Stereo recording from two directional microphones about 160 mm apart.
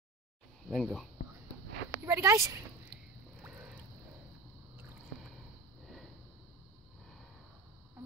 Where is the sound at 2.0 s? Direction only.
20° right (ahead or behind).